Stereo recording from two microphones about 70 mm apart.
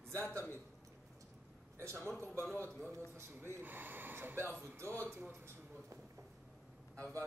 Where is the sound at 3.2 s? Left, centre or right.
Right.